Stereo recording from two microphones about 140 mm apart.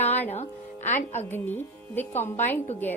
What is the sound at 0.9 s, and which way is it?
Speech, 15° left (ahead or behind).